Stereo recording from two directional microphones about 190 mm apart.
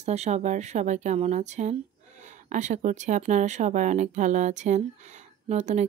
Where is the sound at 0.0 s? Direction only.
35° right (ahead or behind).